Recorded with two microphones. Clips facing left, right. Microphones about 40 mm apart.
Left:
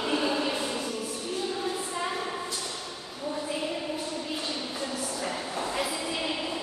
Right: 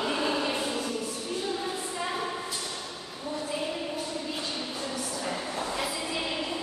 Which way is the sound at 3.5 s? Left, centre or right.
Centre.